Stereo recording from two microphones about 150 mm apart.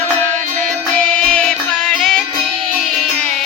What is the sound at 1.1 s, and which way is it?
Music, 5° left (ahead or behind).